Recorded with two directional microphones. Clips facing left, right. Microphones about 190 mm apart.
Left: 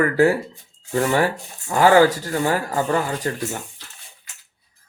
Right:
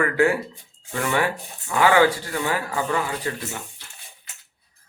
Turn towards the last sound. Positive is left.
turn(degrees=40)  # may be behind; listen again after turning